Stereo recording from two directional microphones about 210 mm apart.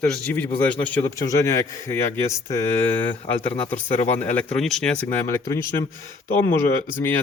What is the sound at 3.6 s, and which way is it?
A man's voice, 10° left (ahead or behind).